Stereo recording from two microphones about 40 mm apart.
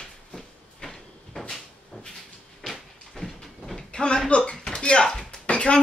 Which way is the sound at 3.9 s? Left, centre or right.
Left.